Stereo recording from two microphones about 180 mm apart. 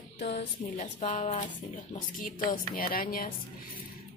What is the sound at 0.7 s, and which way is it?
A woman's voice, 40° left (ahead or behind).